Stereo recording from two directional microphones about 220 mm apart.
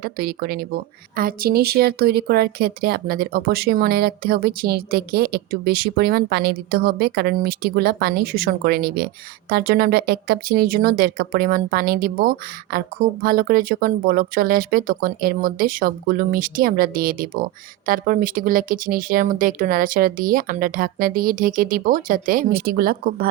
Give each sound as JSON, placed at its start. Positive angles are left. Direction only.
{"t": 0.0, "sound": "speech", "side_deg": -45}